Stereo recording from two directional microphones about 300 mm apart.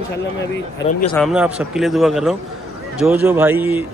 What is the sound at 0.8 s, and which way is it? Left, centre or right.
Speech, centre.